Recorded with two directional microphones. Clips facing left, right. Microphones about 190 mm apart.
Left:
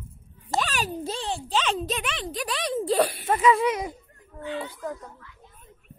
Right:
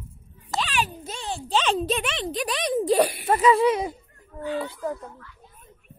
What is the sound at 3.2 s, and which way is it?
Speech, 35° right (ahead or behind).